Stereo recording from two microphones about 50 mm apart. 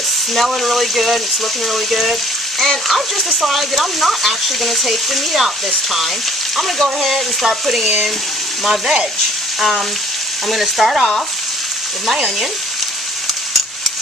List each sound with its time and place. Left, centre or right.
0.3 s speech: centre
6.5 s speech: centre
7.8 s frying: centre
10.5 s speech: centre